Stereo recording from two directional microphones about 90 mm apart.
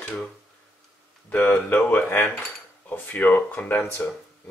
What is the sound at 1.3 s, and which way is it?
Speech, 20° left (ahead or behind).